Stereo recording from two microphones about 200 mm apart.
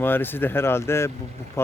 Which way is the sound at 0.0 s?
10° left (ahead or behind).